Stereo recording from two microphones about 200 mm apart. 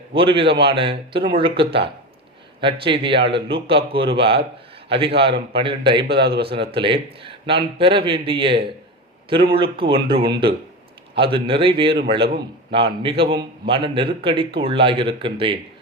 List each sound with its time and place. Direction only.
0.1 s speech: 25° right (ahead or behind)
6.1 s a man's voice: 55° right (ahead or behind)
6.8 s speech: 25° right (ahead or behind)